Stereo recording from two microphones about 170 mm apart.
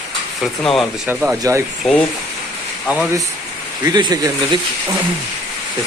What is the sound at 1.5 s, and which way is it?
Speech, 20° right (ahead or behind).